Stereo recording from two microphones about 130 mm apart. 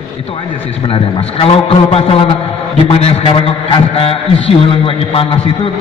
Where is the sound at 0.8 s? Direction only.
45° left (ahead or behind).